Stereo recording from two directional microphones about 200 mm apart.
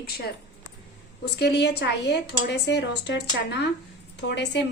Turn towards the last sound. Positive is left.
turn(degrees=60)  # may be behind; listen again after turning